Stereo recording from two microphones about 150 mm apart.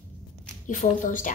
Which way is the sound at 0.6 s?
60° left (ahead or behind).